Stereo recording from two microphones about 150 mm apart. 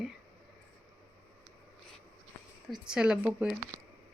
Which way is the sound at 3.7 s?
15° right (ahead or behind).